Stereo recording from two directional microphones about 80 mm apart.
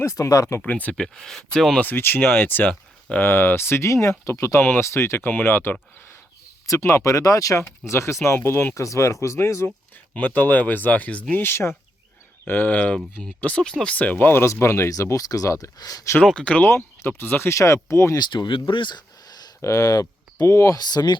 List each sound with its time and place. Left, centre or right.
0.0 s speech: left
0.6 s speech: centre
0.9 s speech: centre
1.8 s speech: left
6.7 s speech: left
10.2 s speech: left
16.2 s speech: centre
16.6 s speech: left
18.2 s speech: left
19.6 s speech: left
20.7 s speech: left